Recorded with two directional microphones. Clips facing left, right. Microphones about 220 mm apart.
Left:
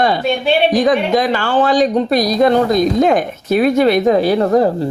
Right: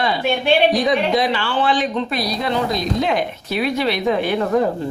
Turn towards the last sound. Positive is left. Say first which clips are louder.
# left 6 dB
turn(degrees=40)  # may be behind; listen again after turning